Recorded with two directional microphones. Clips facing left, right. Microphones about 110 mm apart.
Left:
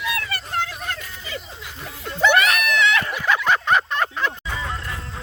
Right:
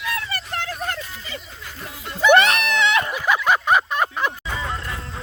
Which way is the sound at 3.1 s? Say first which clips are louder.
Right 1 dB; 10° right (ahead or behind).